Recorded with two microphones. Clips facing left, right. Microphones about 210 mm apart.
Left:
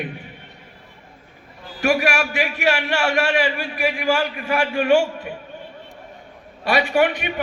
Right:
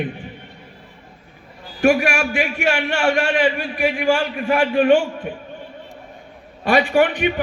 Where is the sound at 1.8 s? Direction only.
50° right (ahead or behind).